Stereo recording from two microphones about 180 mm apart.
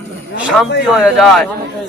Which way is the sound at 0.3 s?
5° right (ahead or behind).